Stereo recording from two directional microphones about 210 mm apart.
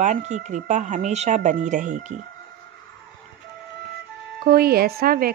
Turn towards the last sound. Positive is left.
turn(degrees=-45)  # may be behind; listen again after turning